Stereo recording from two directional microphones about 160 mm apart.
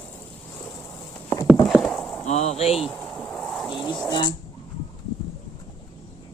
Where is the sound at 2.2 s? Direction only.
45° left (ahead or behind).